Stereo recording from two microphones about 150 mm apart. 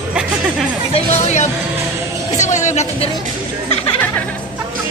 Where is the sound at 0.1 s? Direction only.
5° right (ahead or behind).